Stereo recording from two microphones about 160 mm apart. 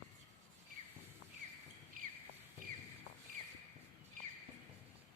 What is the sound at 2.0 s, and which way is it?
Rodents, 60° right (ahead or behind).